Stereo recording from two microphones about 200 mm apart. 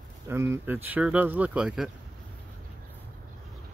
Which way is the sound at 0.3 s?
15° right (ahead or behind).